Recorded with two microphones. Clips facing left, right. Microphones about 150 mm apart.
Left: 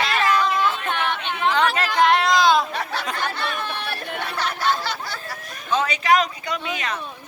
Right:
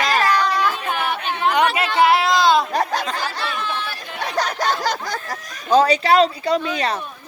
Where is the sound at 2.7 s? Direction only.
40° right (ahead or behind).